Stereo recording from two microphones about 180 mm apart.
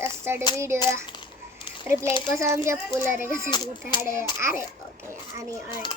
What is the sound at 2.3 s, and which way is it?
A child's voice, 15° right (ahead or behind).